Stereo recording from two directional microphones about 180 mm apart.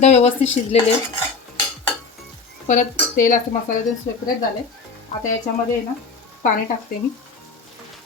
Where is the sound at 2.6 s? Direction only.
45° left (ahead or behind).